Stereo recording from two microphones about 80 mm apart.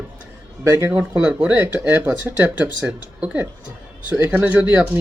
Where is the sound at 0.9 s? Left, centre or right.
Right.